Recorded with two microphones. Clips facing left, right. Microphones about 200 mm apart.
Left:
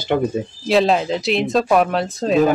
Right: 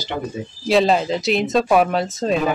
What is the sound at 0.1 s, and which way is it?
Speech, 50° left (ahead or behind).